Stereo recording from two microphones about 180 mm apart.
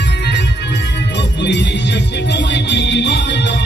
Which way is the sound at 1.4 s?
75° left (ahead or behind).